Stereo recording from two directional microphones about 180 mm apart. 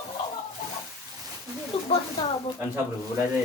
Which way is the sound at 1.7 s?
30° left (ahead or behind).